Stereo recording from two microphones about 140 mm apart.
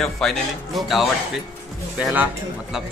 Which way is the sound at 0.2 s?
5° left (ahead or behind).